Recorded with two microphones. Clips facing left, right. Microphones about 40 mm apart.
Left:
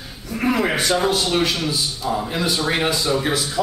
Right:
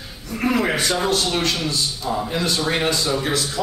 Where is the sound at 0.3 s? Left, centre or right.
Centre.